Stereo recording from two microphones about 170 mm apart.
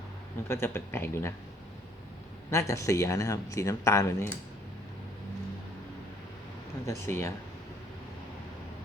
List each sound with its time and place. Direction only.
0.4 s speech: 15° left (ahead or behind)
2.5 s speech: 15° left (ahead or behind)
7.0 s speech: 15° left (ahead or behind)